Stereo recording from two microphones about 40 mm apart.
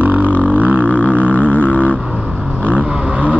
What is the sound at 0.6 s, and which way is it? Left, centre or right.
Didgeridoo, right.